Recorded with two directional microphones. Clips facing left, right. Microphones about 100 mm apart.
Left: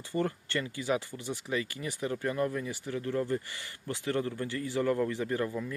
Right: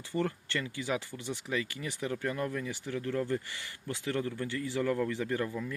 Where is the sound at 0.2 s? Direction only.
25° left (ahead or behind).